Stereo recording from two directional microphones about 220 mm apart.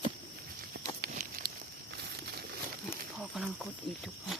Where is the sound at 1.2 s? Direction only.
40° right (ahead or behind).